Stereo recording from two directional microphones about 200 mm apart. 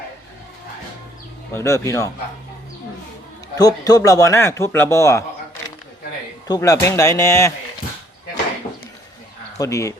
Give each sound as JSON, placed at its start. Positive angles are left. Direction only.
{"t": 1.5, "sound": "speech", "side_deg": 15}
{"t": 3.6, "sound": "speech", "side_deg": 20}
{"t": 6.5, "sound": "speech", "side_deg": 15}
{"t": 9.6, "sound": "speech", "side_deg": 15}